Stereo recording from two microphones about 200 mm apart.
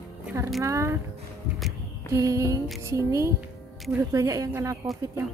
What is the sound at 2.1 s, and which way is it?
A woman's voice, 15° right (ahead or behind).